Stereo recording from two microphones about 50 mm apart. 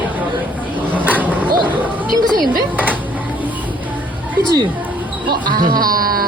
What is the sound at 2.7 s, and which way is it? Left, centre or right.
Music, right.